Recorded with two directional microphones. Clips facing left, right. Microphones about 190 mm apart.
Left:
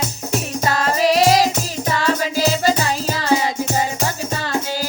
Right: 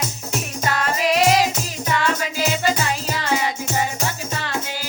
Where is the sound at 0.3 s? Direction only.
35° left (ahead or behind).